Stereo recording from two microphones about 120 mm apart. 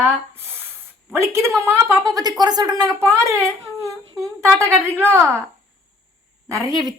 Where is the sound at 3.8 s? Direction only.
25° right (ahead or behind).